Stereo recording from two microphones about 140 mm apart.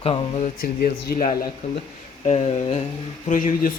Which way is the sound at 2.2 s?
55° left (ahead or behind).